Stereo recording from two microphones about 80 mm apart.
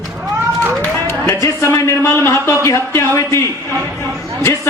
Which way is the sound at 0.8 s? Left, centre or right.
Left.